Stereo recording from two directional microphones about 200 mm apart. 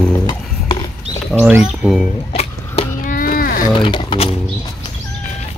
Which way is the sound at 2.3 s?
35° left (ahead or behind).